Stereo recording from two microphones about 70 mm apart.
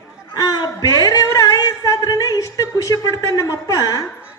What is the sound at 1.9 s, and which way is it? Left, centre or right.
A woman's voice, left.